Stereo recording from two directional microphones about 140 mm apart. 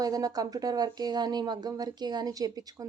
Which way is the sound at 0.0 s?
25° right (ahead or behind).